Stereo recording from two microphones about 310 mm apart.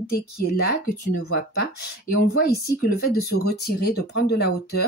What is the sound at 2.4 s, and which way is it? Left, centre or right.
Speech, left.